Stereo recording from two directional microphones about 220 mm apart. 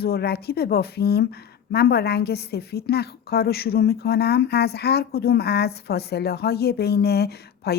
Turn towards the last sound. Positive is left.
turn(degrees=45)  # may be behind; listen again after turning